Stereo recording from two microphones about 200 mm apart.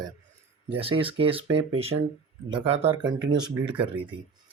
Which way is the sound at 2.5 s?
30° right (ahead or behind).